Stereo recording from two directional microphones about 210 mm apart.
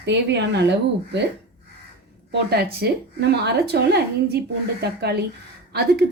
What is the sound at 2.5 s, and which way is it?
A woman's voice, 50° right (ahead or behind).